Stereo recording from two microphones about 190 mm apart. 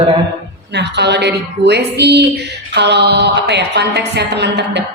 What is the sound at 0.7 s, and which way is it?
Speech, 65° right (ahead or behind).